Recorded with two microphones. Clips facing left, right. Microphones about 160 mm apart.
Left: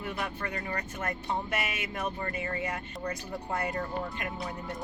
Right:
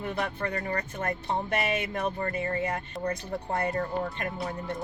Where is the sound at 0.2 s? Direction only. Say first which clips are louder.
Right 4 dB; 35° right (ahead or behind).